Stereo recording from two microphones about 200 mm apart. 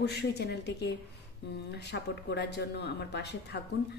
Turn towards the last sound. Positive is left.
turn(degrees=60)  # may be behind; listen again after turning